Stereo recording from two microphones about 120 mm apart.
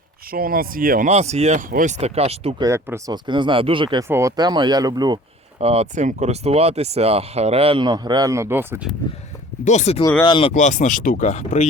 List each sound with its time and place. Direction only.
1.0 s speech: 65° right (ahead or behind)
2.6 s speech: 25° right (ahead or behind)
3.1 s speech: 40° right (ahead or behind)
4.1 s speech: 25° right (ahead or behind)
5.5 s speech: 60° right (ahead or behind); by 8.8 s 20° right (ahead or behind)
9.6 s speech: 70° left (ahead or behind)
10.0 s speech: 25° left (ahead or behind)
10.2 s speech: 45° left (ahead or behind)
10.5 s speech: 90° left; by 11.7 s 75° left (ahead or behind)